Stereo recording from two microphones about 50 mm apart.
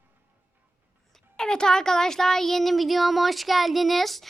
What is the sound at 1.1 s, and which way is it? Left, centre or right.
Speech, centre.